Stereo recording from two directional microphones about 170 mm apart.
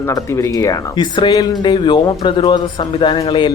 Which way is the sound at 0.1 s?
20° left (ahead or behind).